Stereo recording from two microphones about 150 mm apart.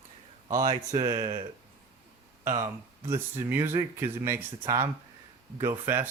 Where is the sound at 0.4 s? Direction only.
30° right (ahead or behind).